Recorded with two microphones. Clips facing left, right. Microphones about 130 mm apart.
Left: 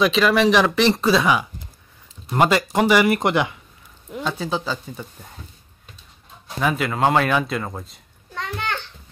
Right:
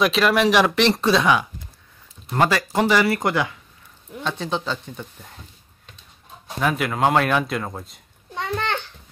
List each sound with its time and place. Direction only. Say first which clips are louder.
0.0 s speech: left 1 dB; centre (ahead or behind)
2.2 s speech: left 2 dB; 15° left (ahead or behind)
4.2 s speech: left 1 dB; 5° left (ahead or behind)
6.6 s speech: even; centre (ahead or behind)
8.4 s a sound: right 2 dB; 30° right (ahead or behind)